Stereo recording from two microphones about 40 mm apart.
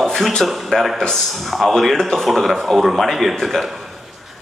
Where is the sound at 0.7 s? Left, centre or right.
Centre.